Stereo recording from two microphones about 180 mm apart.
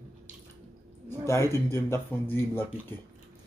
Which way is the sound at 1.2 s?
15° left (ahead or behind).